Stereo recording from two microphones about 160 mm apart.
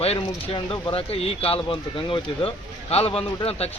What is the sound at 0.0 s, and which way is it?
Speech, 40° left (ahead or behind).